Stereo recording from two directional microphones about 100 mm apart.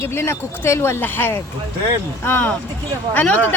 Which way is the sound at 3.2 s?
10° left (ahead or behind).